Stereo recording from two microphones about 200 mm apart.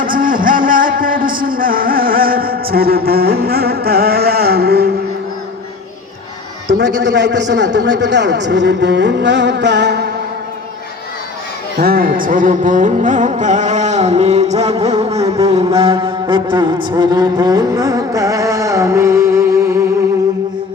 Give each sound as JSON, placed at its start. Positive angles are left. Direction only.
{"t": 0.0, "sound": "music", "side_deg": -45}
{"t": 6.7, "sound": "a man's voice", "side_deg": -60}
{"t": 11.8, "sound": "music", "side_deg": -45}
{"t": 15.1, "sound": "music", "side_deg": -15}
{"t": 15.4, "sound": "mantra", "side_deg": -30}